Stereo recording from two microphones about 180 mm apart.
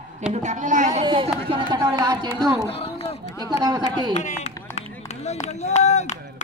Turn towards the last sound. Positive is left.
turn(degrees=40)  # may be behind; listen again after turning